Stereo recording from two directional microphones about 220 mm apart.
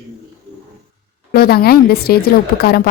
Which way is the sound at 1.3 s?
45° left (ahead or behind).